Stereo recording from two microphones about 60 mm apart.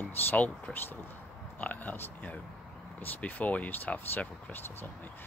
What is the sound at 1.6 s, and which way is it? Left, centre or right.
Speech, left.